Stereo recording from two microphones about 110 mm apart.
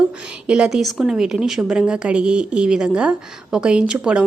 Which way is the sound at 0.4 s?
10° right (ahead or behind).